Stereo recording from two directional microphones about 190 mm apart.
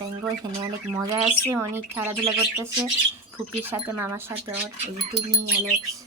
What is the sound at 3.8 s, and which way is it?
Speech, 15° right (ahead or behind).